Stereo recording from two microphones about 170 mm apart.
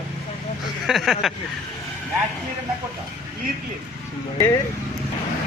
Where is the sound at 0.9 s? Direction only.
Centre (ahead or behind).